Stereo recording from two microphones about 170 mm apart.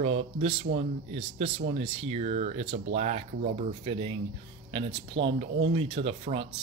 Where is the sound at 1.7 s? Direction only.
40° right (ahead or behind).